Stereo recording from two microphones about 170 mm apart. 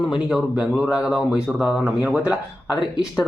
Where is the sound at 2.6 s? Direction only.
25° left (ahead or behind).